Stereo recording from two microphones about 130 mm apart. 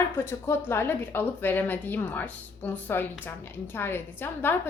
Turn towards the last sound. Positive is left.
turn(degrees=15)  # may be behind; listen again after turning